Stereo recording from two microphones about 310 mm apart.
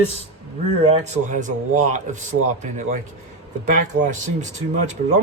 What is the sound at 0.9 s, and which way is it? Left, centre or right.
Speech, right.